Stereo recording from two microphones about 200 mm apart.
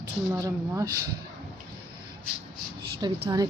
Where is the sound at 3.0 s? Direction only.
20° right (ahead or behind).